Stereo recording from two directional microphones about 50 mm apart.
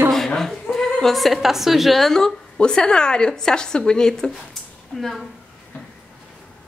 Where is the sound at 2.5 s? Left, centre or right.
Centre.